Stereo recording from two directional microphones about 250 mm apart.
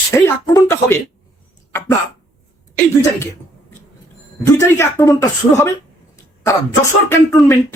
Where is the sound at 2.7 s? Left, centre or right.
Centre.